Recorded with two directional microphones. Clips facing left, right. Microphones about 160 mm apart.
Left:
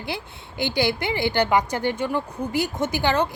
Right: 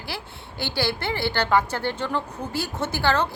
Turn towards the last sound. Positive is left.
turn(degrees=15)  # may be behind; listen again after turning